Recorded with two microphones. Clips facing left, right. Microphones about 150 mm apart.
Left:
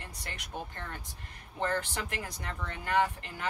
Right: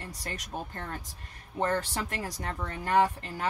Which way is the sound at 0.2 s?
40° right (ahead or behind).